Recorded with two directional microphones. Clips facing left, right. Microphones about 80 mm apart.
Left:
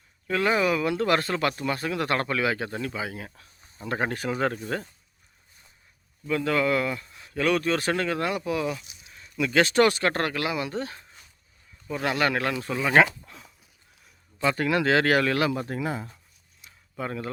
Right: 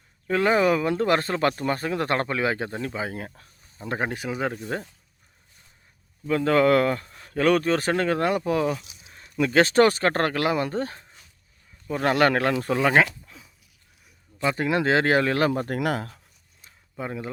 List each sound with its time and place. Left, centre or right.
0.3 s speech: right
3.8 s speech: right
4.2 s speech: centre
6.2 s speech: right
9.0 s a sound: right
9.3 s speech: right
13.0 s a sound: centre
14.4 s speech: right
15.7 s speech: right
17.0 s speech: centre